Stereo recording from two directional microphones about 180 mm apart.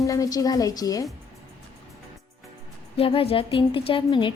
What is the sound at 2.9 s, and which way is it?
Music, 30° left (ahead or behind).